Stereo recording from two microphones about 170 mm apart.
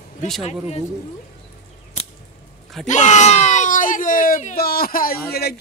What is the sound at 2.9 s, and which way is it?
Speech, 45° left (ahead or behind).